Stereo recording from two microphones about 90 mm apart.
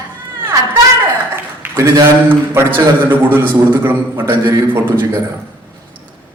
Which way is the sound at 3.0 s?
20° right (ahead or behind).